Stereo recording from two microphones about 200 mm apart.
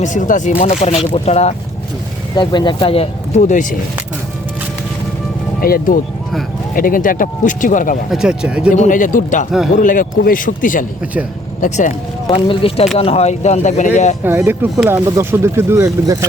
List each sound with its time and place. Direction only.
0.0 s speech: 40° left (ahead or behind)
2.3 s speech: 20° left (ahead or behind); by 3.8 s 40° left (ahead or behind)
5.5 s speech: 45° left (ahead or behind)
8.1 s speech: 5° right (ahead or behind)
8.7 s speech: 40° left (ahead or behind)
12.5 s speech: 30° left (ahead or behind)
14.3 s speech: 10° right (ahead or behind)